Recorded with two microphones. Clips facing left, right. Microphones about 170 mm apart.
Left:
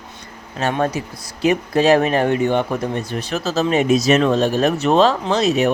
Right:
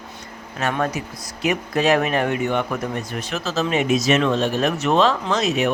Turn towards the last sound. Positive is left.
turn(degrees=35)  # may be behind; listen again after turning